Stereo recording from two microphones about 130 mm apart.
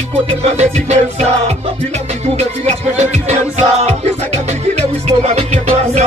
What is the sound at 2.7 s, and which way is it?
Music, 60° right (ahead or behind).